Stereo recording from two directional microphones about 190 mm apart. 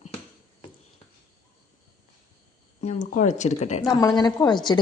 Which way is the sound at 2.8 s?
40° left (ahead or behind).